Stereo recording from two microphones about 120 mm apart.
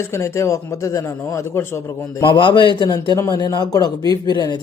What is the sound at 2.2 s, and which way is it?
A man's voice, 45° left (ahead or behind).